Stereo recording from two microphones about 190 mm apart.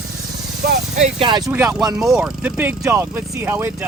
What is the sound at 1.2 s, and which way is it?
Speech, 25° right (ahead or behind).